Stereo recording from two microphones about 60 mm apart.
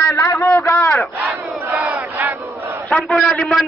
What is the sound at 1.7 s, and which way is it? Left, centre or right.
Battle cry, right.